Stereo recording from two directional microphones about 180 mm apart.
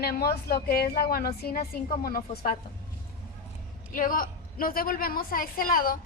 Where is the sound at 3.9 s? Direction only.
50° left (ahead or behind).